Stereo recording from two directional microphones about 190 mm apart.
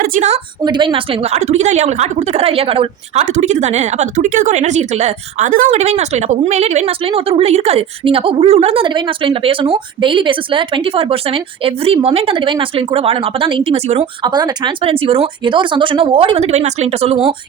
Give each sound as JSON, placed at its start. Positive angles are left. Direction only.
{"t": 0.0, "sound": "a woman's voice", "side_deg": -40}
{"t": 0.6, "sound": "a woman's voice", "side_deg": -25}
{"t": 14.3, "sound": "speech", "side_deg": -20}